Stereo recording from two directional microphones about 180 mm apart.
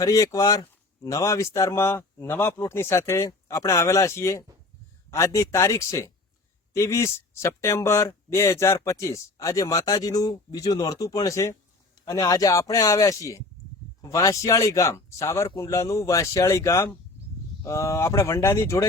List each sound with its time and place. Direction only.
0.0 s speech: 20° left (ahead or behind)